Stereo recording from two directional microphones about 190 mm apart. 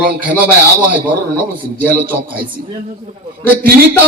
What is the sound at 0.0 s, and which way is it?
Speech, 10° right (ahead or behind).